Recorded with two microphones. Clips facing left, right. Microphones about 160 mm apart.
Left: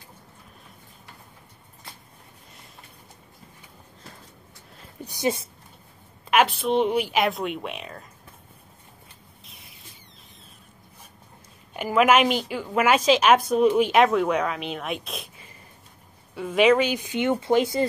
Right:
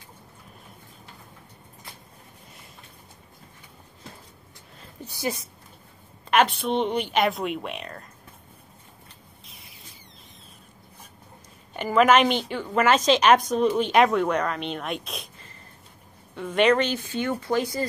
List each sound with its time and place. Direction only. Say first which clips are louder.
5.0 s speech: left 4 dB; 20° left (ahead or behind)
6.3 s a woman's voice: left 1 dB; 5° left (ahead or behind)
9.5 s a sound: even; centre (ahead or behind)
11.7 s a woman's voice: right 1 dB; 5° left (ahead or behind)
16.3 s speech: left 2 dB; 5° left (ahead or behind); by 17.8 s 20° left (ahead or behind)